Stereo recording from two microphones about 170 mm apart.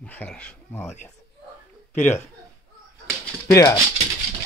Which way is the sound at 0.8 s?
45° left (ahead or behind).